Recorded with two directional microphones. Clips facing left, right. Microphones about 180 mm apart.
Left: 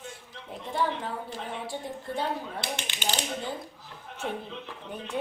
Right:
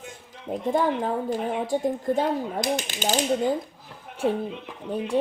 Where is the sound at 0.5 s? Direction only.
45° right (ahead or behind).